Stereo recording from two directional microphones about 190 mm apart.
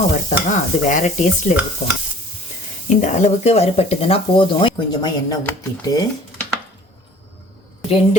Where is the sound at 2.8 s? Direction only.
40° left (ahead or behind); by 5.5 s 20° left (ahead or behind).